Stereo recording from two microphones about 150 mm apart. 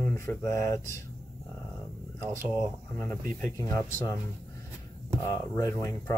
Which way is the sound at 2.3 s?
20° right (ahead or behind).